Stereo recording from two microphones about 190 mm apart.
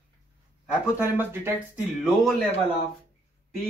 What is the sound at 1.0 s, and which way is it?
Speech, 10° right (ahead or behind).